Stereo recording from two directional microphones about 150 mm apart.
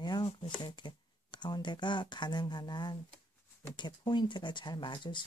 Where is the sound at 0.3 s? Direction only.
35° left (ahead or behind).